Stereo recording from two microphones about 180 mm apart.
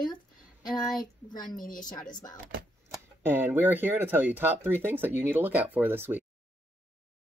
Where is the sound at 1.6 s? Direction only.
50° left (ahead or behind).